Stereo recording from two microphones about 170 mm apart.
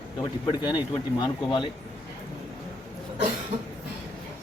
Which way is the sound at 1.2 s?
25° left (ahead or behind).